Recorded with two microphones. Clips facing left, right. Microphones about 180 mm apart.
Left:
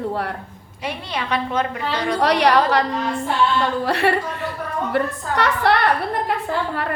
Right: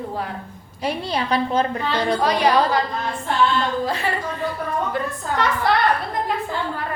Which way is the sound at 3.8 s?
70° left (ahead or behind).